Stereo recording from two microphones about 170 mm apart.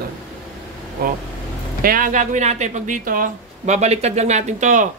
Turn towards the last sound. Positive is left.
turn(degrees=-45)  # may be behind; listen again after turning